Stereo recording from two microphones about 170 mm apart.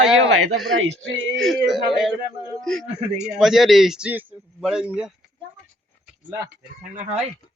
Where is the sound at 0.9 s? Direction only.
90° right.